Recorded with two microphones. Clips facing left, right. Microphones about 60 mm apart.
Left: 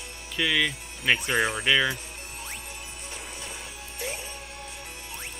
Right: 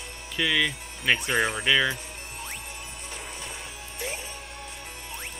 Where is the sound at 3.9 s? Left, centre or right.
Right.